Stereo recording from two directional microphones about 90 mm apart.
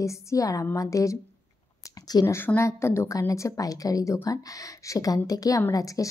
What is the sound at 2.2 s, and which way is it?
A woman's voice, 25° left (ahead or behind).